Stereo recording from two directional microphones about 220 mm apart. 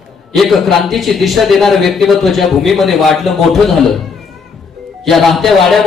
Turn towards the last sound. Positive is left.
turn(degrees=0)  # may be behind; listen again after turning